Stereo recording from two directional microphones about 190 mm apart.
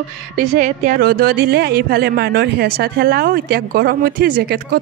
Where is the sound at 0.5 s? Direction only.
45° right (ahead or behind).